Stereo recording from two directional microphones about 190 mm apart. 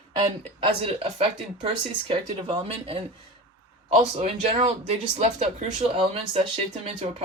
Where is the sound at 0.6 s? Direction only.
30° right (ahead or behind).